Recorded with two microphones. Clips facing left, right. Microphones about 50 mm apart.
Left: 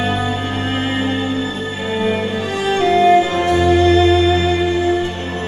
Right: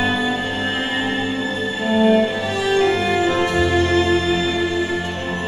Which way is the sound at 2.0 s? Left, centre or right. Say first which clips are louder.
Right 4 dB; left.